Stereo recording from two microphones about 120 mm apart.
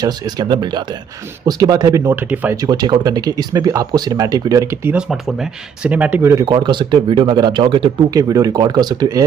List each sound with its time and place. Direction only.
0.0 s speech: 35° right (ahead or behind)
2.2 s speech: 15° right (ahead or behind)
2.5 s speech: 30° right (ahead or behind)
4.9 s speech: 5° right (ahead or behind)
6.4 s speech: 40° right (ahead or behind)
8.1 s speech: 30° right (ahead or behind)